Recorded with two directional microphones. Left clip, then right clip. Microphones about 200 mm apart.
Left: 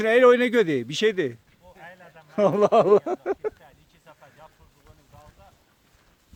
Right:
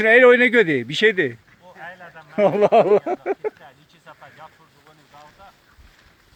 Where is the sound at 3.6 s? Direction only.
Centre (ahead or behind).